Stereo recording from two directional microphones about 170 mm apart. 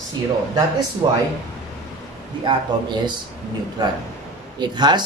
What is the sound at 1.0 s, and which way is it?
Speech, 25° right (ahead or behind).